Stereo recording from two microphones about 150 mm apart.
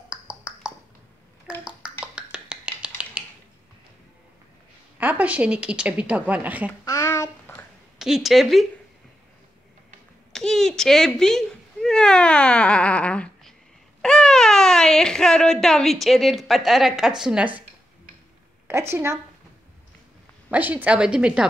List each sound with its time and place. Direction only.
0.1 s a sound: 5° right (ahead or behind)
1.6 s finger snapping: 5° right (ahead or behind)
4.9 s a woman's voice: 10° right (ahead or behind)
6.8 s a sound: 20° left (ahead or behind)
8.0 s speech: centre (ahead or behind)
10.3 s cat: 5° left (ahead or behind)
14.0 s speech: 5° left (ahead or behind)
18.7 s a woman's voice: 15° right (ahead or behind)
20.4 s a woman's voice: 10° right (ahead or behind)